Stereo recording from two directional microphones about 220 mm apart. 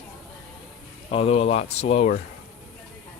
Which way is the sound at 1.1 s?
25° left (ahead or behind).